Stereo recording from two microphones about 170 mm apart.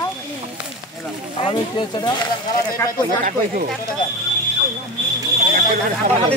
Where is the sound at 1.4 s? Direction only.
30° left (ahead or behind).